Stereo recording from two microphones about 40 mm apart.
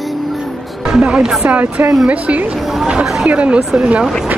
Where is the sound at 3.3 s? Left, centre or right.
Right.